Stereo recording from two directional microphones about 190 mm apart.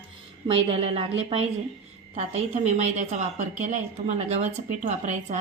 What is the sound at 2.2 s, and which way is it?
A woman's voice, 35° right (ahead or behind).